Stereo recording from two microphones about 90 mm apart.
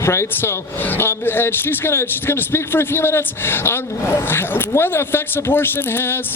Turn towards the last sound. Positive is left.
turn(degrees=25)  # may be behind; listen again after turning